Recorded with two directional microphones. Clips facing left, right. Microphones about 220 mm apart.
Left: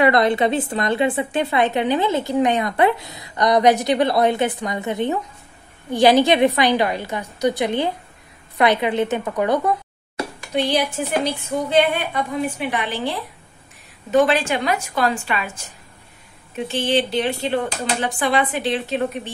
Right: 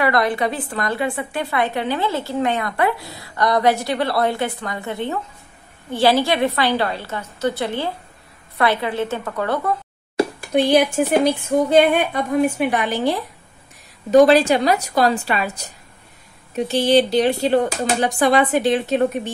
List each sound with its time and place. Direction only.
0.0 s a woman's voice: 20° left (ahead or behind)
11.0 s a woman's voice: 50° right (ahead or behind)
14.1 s a woman's voice: 40° right (ahead or behind)